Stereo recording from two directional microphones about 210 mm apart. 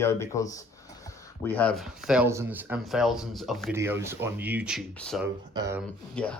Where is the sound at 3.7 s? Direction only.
10° right (ahead or behind).